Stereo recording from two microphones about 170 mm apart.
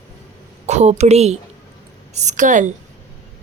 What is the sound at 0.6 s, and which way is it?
A woman's voice, 40° right (ahead or behind).